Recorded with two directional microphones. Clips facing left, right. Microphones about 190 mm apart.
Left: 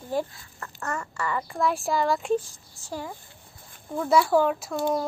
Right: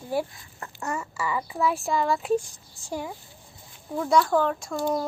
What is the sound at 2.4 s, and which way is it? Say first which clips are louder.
Speech: right 1 dB; 15° right (ahead or behind).